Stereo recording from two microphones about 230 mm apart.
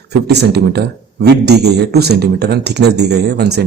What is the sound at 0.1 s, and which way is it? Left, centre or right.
A man's voice, right.